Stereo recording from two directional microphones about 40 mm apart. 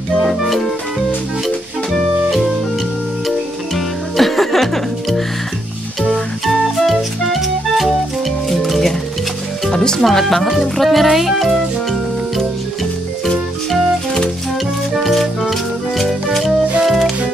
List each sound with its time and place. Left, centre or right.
0.3 s music: centre
3.3 s music: centre
6.1 s music: centre
9.7 s music: centre
10.0 s speech: centre
13.7 s music: centre
16.0 s music: centre